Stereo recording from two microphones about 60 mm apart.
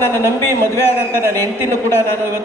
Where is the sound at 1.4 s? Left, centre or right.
Left.